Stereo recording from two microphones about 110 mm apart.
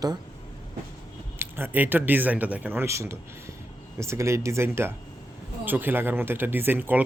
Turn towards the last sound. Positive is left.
turn(degrees=-15)  # may be behind; listen again after turning